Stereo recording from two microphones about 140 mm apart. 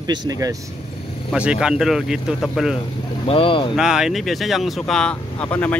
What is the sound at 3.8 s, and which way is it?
Speech, 5° right (ahead or behind).